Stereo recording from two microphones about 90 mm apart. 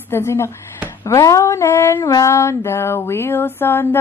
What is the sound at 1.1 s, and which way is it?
Female singing, 35° left (ahead or behind).